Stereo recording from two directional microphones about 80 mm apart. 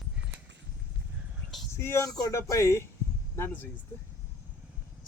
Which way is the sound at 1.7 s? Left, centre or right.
Left.